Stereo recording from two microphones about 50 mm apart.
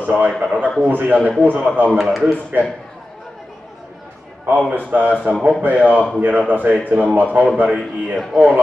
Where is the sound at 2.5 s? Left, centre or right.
Right.